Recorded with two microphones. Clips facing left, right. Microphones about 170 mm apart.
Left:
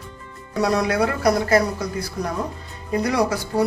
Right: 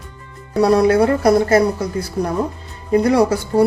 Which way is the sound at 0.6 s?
30° right (ahead or behind).